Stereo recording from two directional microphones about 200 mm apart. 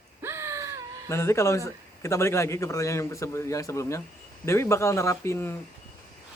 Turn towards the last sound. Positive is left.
turn(degrees=10)  # may be behind; listen again after turning